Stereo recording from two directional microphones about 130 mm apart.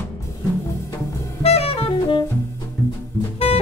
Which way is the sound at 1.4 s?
50° left (ahead or behind).